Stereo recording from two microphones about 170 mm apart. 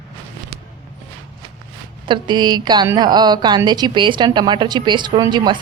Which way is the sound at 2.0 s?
25° right (ahead or behind).